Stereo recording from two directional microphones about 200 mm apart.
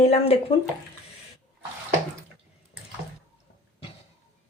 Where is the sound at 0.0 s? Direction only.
30° left (ahead or behind).